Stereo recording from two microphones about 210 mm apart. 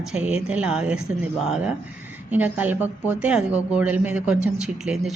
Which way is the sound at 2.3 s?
5° right (ahead or behind).